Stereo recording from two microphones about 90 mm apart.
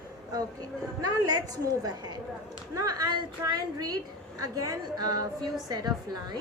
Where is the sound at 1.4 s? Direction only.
50° right (ahead or behind).